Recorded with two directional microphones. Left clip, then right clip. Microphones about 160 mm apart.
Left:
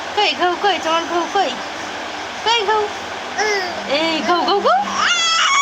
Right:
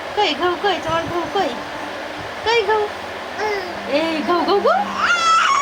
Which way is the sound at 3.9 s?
Centre (ahead or behind).